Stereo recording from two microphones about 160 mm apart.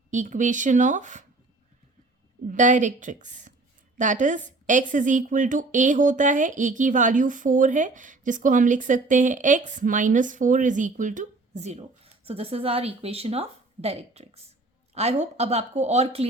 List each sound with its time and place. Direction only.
0.1 s a woman's voice: 50° right (ahead or behind)
2.5 s a woman's voice: 50° right (ahead or behind)